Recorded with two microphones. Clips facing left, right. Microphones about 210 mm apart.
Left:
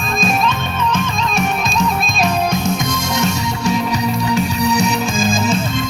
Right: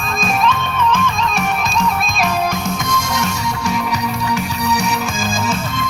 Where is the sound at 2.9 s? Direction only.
25° left (ahead or behind).